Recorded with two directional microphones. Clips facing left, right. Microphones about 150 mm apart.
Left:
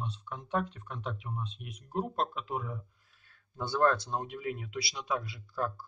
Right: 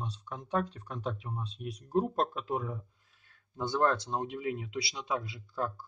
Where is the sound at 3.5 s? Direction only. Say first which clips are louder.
Left 1 dB; 15° right (ahead or behind).